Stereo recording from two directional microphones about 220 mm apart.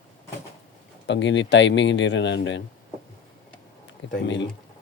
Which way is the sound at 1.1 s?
55° left (ahead or behind).